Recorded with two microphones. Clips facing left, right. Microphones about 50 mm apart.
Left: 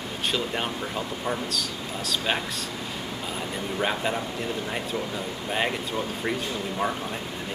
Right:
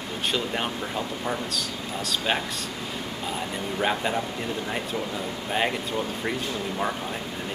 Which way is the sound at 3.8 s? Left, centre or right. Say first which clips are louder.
Right 1 dB; centre.